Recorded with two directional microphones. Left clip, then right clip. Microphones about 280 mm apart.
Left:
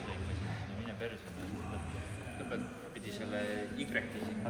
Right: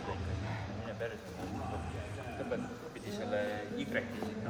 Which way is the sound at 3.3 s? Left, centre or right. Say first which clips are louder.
Right 2 dB; right.